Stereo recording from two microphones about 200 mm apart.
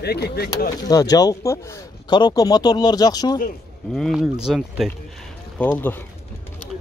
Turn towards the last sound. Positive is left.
turn(degrees=10)  # may be behind; listen again after turning